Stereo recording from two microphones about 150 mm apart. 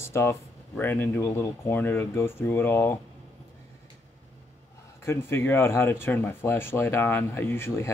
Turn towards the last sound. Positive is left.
turn(degrees=15)  # may be behind; listen again after turning